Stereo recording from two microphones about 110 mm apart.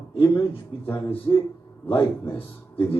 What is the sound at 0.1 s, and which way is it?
Speech, 50° left (ahead or behind).